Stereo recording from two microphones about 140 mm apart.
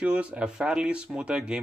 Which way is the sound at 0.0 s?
10° right (ahead or behind).